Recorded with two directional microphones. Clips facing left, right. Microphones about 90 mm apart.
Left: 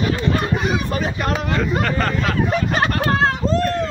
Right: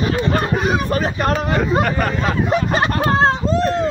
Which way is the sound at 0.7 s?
40° right (ahead or behind).